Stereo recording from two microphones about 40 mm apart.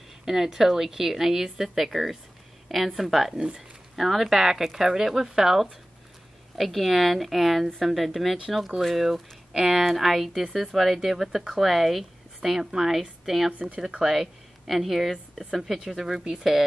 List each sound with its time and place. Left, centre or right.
0.2 s a woman's voice: centre
6.5 s a woman's voice: centre
13.5 s speech: right
13.7 s a woman's voice: centre
14.0 s speech: centre